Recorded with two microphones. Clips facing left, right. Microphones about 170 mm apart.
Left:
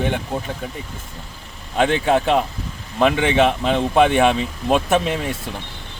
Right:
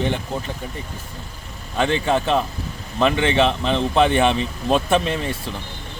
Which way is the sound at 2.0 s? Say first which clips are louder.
Left 2 dB; 15° left (ahead or behind).